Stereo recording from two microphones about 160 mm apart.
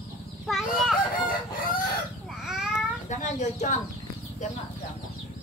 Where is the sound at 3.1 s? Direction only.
50° left (ahead or behind).